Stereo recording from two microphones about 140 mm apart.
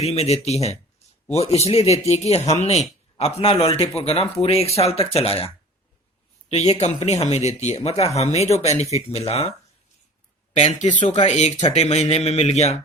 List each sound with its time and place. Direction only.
0.0 s a man's voice: 45° left (ahead or behind)
6.5 s a man's voice: 50° left (ahead or behind)
10.5 s speech: 55° left (ahead or behind)
11.0 s a man's voice: 45° left (ahead or behind)